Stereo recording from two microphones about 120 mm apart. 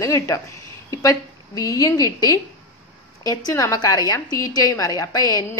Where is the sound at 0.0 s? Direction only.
25° left (ahead or behind).